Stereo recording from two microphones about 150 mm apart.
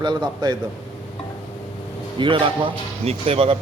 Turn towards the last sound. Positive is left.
turn(degrees=-40)  # may be behind; listen again after turning